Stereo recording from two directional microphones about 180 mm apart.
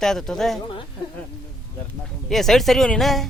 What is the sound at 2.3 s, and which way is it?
Speech, centre (ahead or behind).